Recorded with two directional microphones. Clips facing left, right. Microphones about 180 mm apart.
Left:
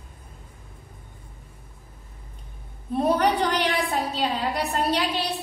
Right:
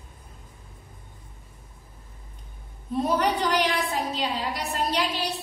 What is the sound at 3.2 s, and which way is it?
A woman's voice, 60° left (ahead or behind).